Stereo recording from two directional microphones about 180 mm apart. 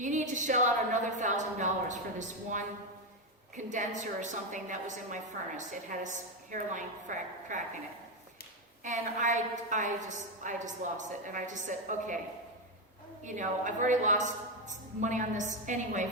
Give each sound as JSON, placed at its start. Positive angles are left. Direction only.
{"t": 0.0, "sound": "a woman's voice", "side_deg": -45}
{"t": 8.8, "sound": "a woman's voice", "side_deg": -45}
{"t": 13.2, "sound": "a woman's voice", "side_deg": -45}